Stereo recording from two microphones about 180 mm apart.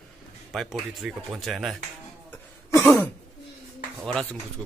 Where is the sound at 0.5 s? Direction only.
Centre (ahead or behind).